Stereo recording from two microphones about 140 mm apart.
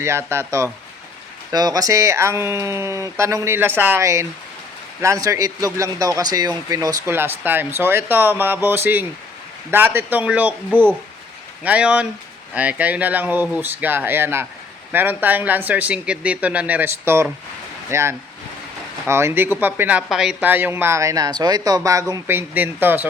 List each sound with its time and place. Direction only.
0.0 s speech: 20° right (ahead or behind)
10.7 s speech: 10° left (ahead or behind)
11.6 s speech: 10° right (ahead or behind)
20.5 s speech: 15° right (ahead or behind)